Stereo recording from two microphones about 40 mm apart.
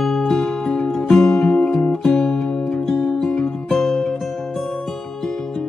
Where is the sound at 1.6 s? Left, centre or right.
Left.